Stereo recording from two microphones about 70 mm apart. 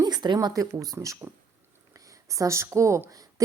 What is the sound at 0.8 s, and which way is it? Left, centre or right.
Speech, right.